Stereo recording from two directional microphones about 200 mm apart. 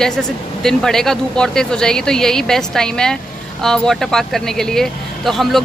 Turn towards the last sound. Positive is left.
turn(degrees=0)  # may be behind; listen again after turning